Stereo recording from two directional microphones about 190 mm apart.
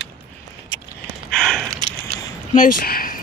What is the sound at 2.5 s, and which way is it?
Speech, 50° left (ahead or behind).